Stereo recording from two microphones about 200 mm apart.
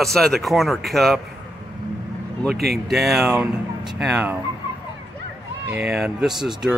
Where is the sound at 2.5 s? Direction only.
50° right (ahead or behind).